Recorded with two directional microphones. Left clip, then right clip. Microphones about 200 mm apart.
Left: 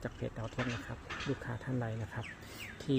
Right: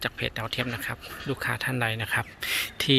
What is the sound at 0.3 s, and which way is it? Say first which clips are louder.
Speech: right 9 dB; 15° right (ahead or behind).